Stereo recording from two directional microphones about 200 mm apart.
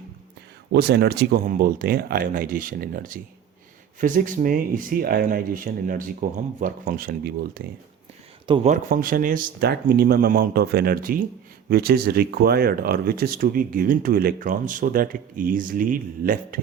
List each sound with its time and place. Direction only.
0.7 s speech: 55° right (ahead or behind)
8.4 s speech: 25° right (ahead or behind)
8.9 s speech: 45° right (ahead or behind)